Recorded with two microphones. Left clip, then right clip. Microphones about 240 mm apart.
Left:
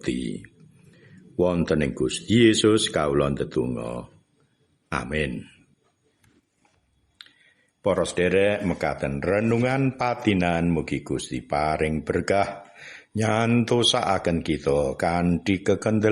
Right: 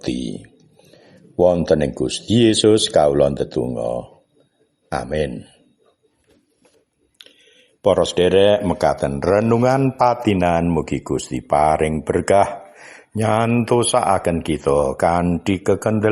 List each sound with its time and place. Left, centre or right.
0.0 s speech: centre
1.4 s a man's voice: centre
7.8 s speech: centre